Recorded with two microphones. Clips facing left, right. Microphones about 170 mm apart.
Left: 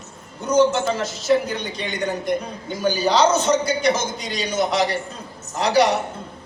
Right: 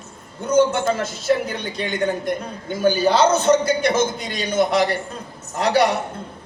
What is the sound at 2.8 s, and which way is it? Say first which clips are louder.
A man's voice: right 2 dB; 55° right (ahead or behind).